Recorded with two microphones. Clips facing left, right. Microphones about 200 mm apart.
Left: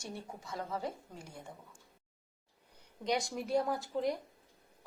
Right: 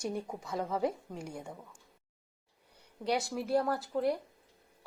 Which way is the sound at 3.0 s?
5° right (ahead or behind).